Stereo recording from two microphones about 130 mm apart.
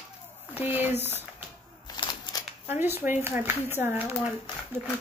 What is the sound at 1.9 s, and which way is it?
Scissors, 35° left (ahead or behind).